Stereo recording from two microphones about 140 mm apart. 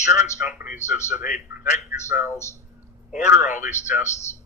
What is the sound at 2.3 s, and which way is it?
Speech, 20° left (ahead or behind).